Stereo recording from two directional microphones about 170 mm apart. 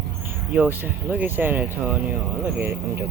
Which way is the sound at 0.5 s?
10° right (ahead or behind).